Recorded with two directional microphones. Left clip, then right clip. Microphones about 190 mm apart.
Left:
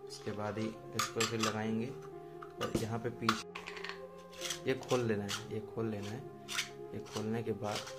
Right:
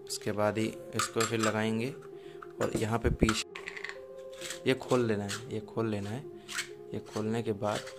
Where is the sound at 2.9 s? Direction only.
50° right (ahead or behind).